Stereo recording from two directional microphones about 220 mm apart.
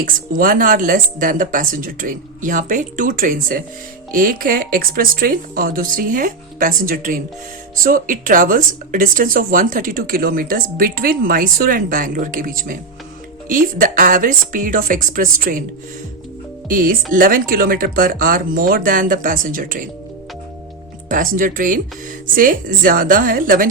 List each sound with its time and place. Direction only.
0.0 s speech: 40° right (ahead or behind)
16.6 s speech: 40° right (ahead or behind)
21.1 s speech: 40° right (ahead or behind)